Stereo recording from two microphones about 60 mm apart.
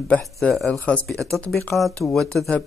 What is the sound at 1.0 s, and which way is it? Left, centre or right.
Speech, centre.